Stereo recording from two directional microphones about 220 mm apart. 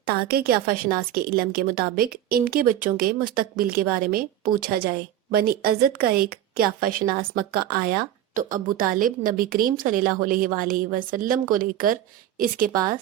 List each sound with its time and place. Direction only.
0.3 s a woman's voice: 45° right (ahead or behind)